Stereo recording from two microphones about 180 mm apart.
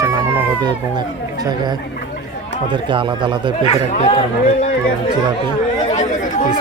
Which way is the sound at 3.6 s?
35° left (ahead or behind).